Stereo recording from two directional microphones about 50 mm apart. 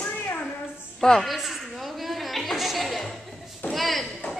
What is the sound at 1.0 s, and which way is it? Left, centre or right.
Speech, centre.